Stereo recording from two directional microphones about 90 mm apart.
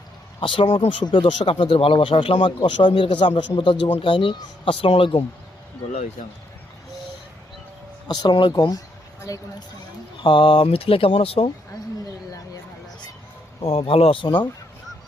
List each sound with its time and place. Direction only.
0.3 s speech: 70° left (ahead or behind)
4.6 s speech: 85° left
8.0 s speech: 50° left (ahead or behind)
10.2 s speech: 70° left (ahead or behind); by 11.5 s 85° left
13.6 s speech: 90° left; by 14.4 s 65° left (ahead or behind)